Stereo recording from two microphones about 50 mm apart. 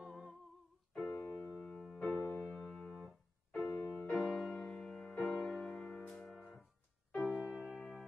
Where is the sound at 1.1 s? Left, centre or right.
Left.